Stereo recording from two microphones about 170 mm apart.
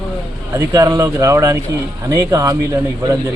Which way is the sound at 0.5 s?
20° right (ahead or behind).